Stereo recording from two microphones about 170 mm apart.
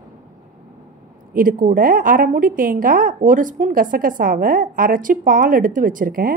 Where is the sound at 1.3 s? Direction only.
55° right (ahead or behind).